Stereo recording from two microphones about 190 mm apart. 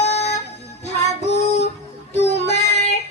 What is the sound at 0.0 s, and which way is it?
Music, 35° left (ahead or behind).